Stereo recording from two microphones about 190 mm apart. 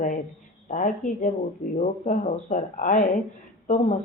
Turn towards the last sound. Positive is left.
turn(degrees=40)  # may be behind; listen again after turning